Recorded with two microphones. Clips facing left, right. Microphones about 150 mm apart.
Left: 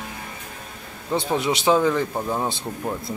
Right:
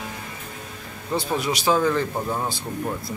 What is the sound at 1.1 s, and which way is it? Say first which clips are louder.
A man's voice: left 2 dB; 20° left (ahead or behind).